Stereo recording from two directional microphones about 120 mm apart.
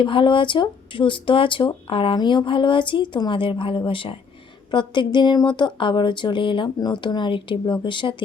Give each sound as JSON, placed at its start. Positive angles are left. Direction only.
{"t": 0.0, "sound": "speech", "side_deg": 45}